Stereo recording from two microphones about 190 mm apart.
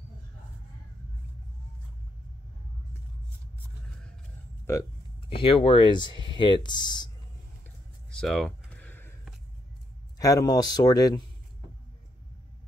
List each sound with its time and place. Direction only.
4.7 s speech: 15° left (ahead or behind)
5.3 s speech: 30° left (ahead or behind)
8.1 s a sound: 5° left (ahead or behind)
10.1 s speech: 20° left (ahead or behind)